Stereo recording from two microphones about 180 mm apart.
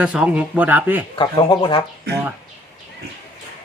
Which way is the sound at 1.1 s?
25° left (ahead or behind).